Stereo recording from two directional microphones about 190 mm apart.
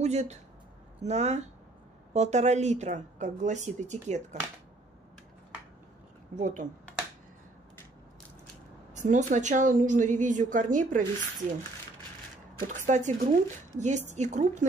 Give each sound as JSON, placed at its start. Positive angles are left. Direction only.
{"t": 0.0, "sound": "a woman's voice", "side_deg": -35}
{"t": 6.3, "sound": "a woman's voice", "side_deg": -40}
{"t": 8.9, "sound": "a woman's voice", "side_deg": -40}
{"t": 12.5, "sound": "a woman's voice", "side_deg": -40}